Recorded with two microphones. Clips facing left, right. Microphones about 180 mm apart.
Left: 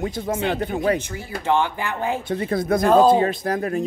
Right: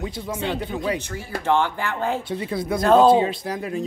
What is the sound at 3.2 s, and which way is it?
Speech, 50° left (ahead or behind).